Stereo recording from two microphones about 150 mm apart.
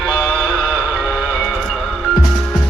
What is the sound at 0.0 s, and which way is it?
Music, centre (ahead or behind).